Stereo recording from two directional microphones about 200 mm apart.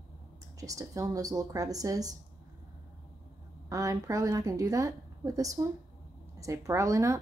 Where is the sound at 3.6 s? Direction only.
15° right (ahead or behind).